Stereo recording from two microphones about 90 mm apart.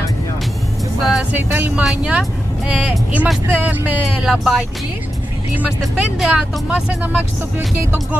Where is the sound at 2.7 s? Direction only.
15° right (ahead or behind).